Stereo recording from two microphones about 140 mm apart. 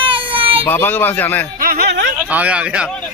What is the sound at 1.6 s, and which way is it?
Speech, 90° right.